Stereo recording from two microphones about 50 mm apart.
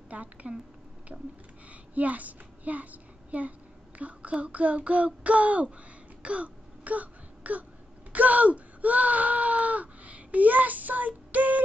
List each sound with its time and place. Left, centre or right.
0.1 s child singing: right
1.7 s a child's voice: right
4.0 s child singing: right
6.2 s throat clearing: right
8.1 s speech: right